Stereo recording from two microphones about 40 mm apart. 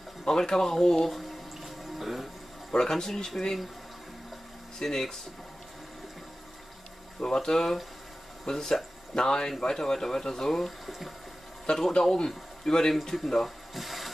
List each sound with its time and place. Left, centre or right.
0.2 s speech: centre
1.6 s music: centre
2.7 s speech: centre
4.7 s speech: centre
7.2 s speech: centre
10.9 s water: centre
12.0 s speech: centre